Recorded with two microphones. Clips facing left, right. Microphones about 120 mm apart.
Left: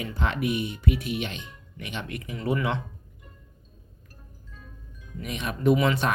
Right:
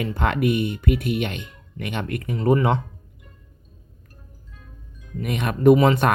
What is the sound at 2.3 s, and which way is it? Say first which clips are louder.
Speech: right 8 dB; 40° right (ahead or behind).